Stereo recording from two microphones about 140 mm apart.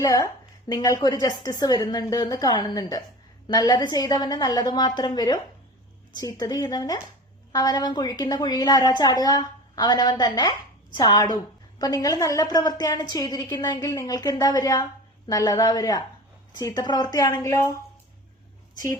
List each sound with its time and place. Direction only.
0.0 s a woman's voice: 25° left (ahead or behind)